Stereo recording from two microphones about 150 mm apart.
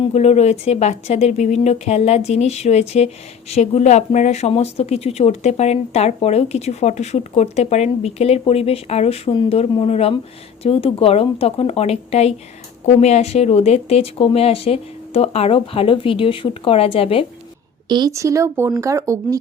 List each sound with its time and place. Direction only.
0.0 s speech: 45° left (ahead or behind)
17.8 s speech: 30° right (ahead or behind)